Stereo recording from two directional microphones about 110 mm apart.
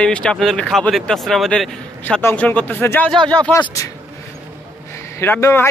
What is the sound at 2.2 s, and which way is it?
Speech, 20° left (ahead or behind).